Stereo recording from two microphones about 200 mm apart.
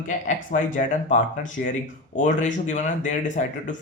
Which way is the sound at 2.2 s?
35° left (ahead or behind).